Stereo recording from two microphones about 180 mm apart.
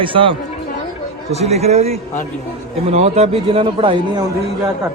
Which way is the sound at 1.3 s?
35° right (ahead or behind).